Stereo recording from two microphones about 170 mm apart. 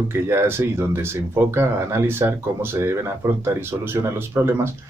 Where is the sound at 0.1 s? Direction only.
15° right (ahead or behind).